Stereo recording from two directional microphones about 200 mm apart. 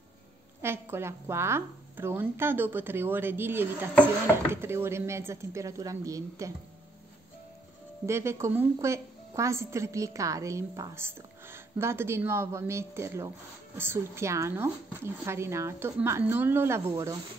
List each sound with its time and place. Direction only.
0.6 s a woman's voice: 10° right (ahead or behind)
8.1 s a woman's voice: 15° right (ahead or behind)